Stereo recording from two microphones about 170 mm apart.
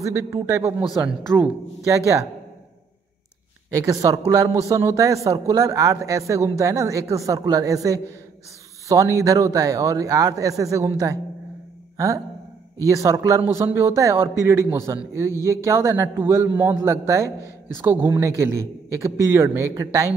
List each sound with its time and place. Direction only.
0.0 s a man's voice: 15° right (ahead or behind)
0.8 s speech: 5° right (ahead or behind)
3.7 s a man's voice: 20° right (ahead or behind)
12.8 s a man's voice: 20° right (ahead or behind)